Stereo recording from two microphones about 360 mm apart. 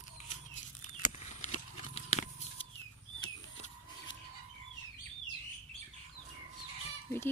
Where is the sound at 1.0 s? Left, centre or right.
Centre.